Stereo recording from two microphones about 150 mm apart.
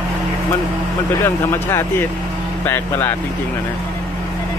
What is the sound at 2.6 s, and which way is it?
Speech, 15° left (ahead or behind).